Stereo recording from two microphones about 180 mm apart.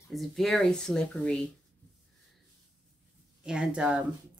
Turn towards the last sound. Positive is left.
turn(degrees=-5)  # may be behind; listen again after turning